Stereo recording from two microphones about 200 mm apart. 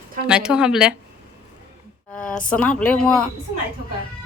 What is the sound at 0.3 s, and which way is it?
Speech, 5° right (ahead or behind).